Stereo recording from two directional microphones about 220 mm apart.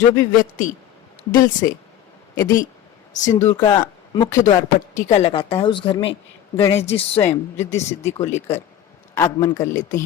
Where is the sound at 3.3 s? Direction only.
15° left (ahead or behind).